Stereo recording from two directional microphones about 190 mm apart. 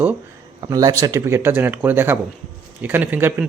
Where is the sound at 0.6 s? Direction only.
20° right (ahead or behind).